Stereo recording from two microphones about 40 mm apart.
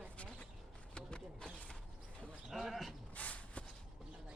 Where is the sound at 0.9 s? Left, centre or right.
Left.